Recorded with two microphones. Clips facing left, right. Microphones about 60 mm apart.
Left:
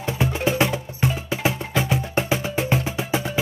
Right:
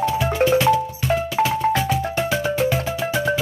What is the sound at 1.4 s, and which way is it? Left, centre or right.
Music, left.